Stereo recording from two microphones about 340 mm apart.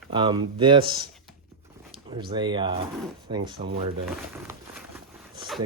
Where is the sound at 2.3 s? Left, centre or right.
Centre.